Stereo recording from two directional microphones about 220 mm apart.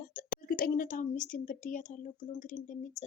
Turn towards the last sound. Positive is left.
turn(degrees=35)  # may be behind; listen again after turning